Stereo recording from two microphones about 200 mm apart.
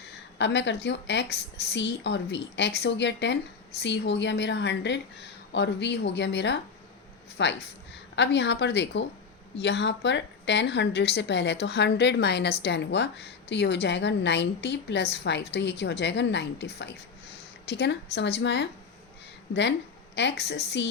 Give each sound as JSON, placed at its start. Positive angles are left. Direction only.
{"t": 0.3, "sound": "a woman's voice", "side_deg": 60}
{"t": 20.1, "sound": "a woman's voice", "side_deg": 60}